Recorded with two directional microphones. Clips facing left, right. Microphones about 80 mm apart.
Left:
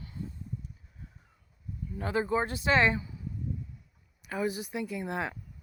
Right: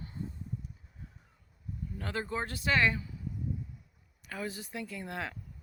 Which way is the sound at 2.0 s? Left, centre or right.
Centre.